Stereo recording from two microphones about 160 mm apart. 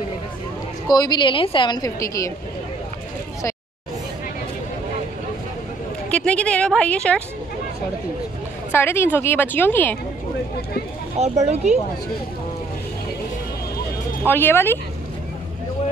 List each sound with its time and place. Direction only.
0.8 s a woman's voice: 25° left (ahead or behind)
6.0 s a woman's voice: 10° left (ahead or behind)
8.7 s a woman's voice: 15° left (ahead or behind)
11.1 s speech: 45° right (ahead or behind)
14.2 s a woman's voice: 15° left (ahead or behind)